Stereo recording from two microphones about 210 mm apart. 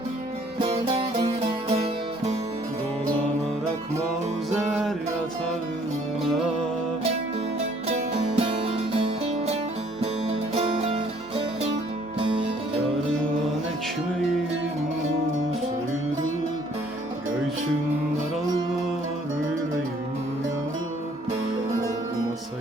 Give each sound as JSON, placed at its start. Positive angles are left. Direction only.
{"t": 0.6, "sound": "music", "side_deg": -25}
{"t": 8.4, "sound": "music", "side_deg": -25}
{"t": 10.0, "sound": "music", "side_deg": -30}